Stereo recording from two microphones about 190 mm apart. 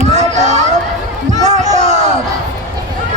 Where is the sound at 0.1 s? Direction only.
35° right (ahead or behind).